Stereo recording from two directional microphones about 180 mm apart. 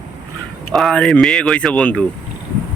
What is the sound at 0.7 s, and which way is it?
Speech, centre (ahead or behind).